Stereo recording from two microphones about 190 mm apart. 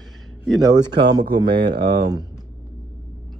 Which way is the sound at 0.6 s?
20° right (ahead or behind).